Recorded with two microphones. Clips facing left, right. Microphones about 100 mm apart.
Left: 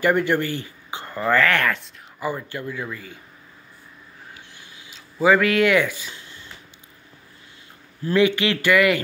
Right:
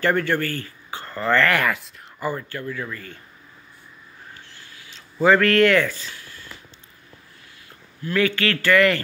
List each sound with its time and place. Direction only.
0.0 s speech: 15° left (ahead or behind); by 1.9 s 5° right (ahead or behind)
2.1 s speech: 10° left (ahead or behind)
4.3 s a sound: 15° left (ahead or behind)
5.2 s speech: 5° left (ahead or behind)
8.2 s speech: 15° left (ahead or behind)